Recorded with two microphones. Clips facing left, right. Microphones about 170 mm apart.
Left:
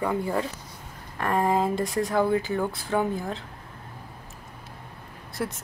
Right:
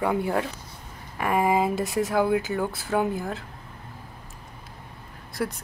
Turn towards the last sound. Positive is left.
turn(degrees=0)  # may be behind; listen again after turning